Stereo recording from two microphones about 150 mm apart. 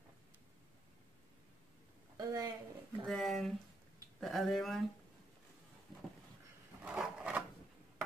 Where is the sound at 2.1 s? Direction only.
25° right (ahead or behind).